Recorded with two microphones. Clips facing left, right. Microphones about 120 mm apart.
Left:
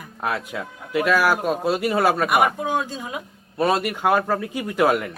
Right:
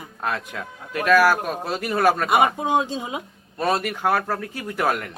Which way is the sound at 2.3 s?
20° right (ahead or behind).